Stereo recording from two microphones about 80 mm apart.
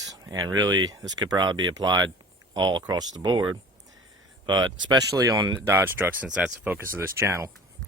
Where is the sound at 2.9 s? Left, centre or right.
Right.